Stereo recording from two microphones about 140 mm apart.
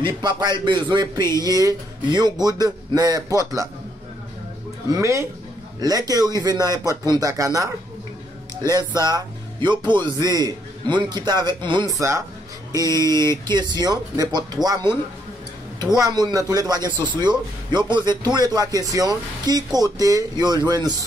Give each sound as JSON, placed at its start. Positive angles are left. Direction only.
{"t": 0.0, "sound": "a man's voice", "side_deg": -30}
{"t": 4.9, "sound": "a man's voice", "side_deg": -20}
{"t": 11.9, "sound": "speech", "side_deg": -20}
{"t": 13.5, "sound": "speech", "side_deg": -30}
{"t": 16.0, "sound": "speech", "side_deg": -30}